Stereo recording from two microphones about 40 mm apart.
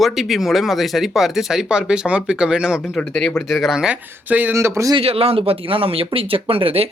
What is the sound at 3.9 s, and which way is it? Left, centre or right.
Speech, right.